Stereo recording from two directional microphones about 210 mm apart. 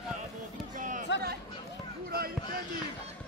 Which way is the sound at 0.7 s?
35° right (ahead or behind).